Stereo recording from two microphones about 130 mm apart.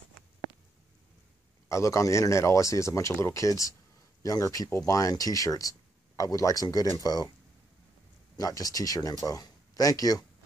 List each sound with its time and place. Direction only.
1.7 s speech: 25° left (ahead or behind)
8.4 s speech: 25° left (ahead or behind)